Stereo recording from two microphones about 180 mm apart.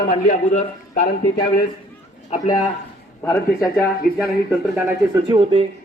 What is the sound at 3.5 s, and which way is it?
Speech, centre (ahead or behind).